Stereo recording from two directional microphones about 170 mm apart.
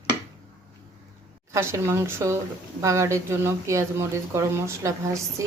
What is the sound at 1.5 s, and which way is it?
A woman's voice, 15° right (ahead or behind).